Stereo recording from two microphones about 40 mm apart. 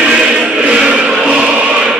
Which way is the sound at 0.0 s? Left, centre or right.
Right.